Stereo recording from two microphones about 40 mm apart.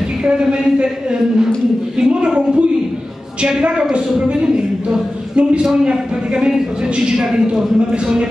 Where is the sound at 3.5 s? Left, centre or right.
Right.